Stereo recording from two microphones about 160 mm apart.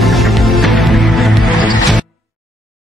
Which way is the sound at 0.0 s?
Centre (ahead or behind).